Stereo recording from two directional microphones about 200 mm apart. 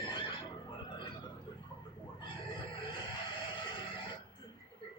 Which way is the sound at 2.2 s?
25° left (ahead or behind).